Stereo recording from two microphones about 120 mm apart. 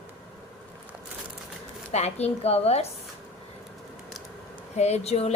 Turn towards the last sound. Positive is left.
turn(degrees=60)  # may be behind; listen again after turning